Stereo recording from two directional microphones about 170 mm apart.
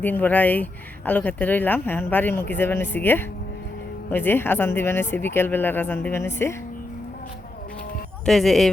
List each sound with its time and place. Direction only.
0.0 s speech: 10° left (ahead or behind)
8.2 s speech: centre (ahead or behind)